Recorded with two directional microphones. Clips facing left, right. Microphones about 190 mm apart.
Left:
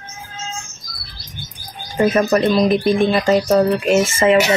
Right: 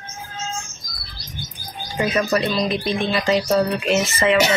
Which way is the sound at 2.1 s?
50° left (ahead or behind).